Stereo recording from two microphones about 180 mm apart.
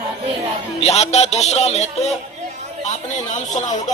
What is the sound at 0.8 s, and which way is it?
Speech, 35° left (ahead or behind).